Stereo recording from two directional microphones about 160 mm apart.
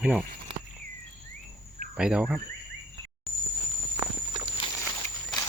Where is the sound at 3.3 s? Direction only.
Centre (ahead or behind).